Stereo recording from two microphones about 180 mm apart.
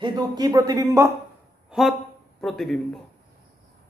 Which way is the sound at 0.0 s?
25° right (ahead or behind).